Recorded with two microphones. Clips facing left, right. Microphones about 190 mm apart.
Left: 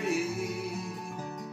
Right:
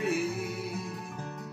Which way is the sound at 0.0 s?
Centre (ahead or behind).